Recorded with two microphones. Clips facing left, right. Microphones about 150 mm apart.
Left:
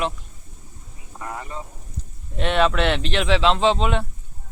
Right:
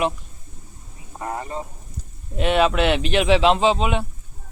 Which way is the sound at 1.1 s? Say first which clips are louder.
Right 4 dB; 35° right (ahead or behind).